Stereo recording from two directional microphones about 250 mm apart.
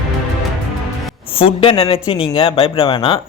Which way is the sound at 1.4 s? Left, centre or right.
Left.